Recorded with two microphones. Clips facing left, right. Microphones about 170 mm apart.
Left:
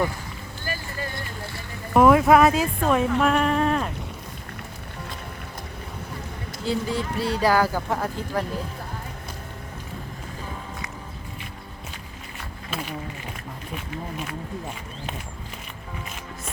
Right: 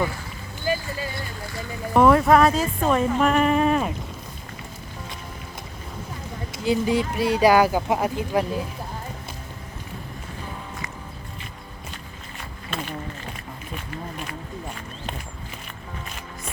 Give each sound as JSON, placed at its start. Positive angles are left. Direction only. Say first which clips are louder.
{"t": 0.6, "sound": "vehicle", "louder": "right 6 dB", "side_deg": -15}
{"t": 1.9, "sound": "speech", "louder": "even", "side_deg": 5}
{"t": 6.7, "sound": "speech", "louder": "right 4 dB", "side_deg": -15}
{"t": 13.7, "sound": "speech", "louder": "left 1 dB", "side_deg": 0}